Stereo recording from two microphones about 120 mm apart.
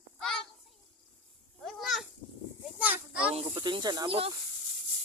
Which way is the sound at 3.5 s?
40° right (ahead or behind).